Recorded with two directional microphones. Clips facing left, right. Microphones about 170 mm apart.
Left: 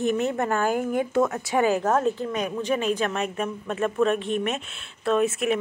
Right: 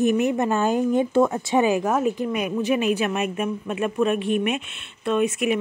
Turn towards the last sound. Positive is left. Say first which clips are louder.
# right 1 dB
turn(degrees=0)  # may be behind; listen again after turning